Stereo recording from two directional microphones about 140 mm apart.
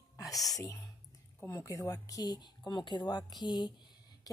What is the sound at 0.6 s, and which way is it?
A woman's voice, 20° left (ahead or behind).